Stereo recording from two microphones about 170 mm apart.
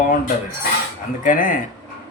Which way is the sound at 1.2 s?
55° left (ahead or behind).